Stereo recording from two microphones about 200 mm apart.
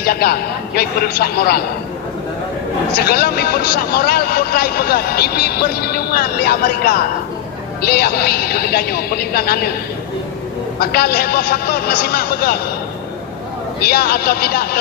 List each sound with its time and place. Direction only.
0.0 s speech: 50° left (ahead or behind)
3.0 s speech: 50° left (ahead or behind)
10.8 s speech: 50° left (ahead or behind)
13.7 s speech: 50° left (ahead or behind)